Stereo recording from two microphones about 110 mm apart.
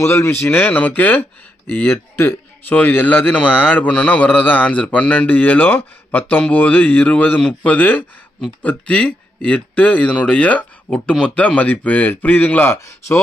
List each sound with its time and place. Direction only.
0.0 s speech: 25° left (ahead or behind)